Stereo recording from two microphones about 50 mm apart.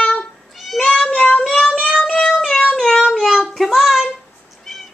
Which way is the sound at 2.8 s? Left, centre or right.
Centre.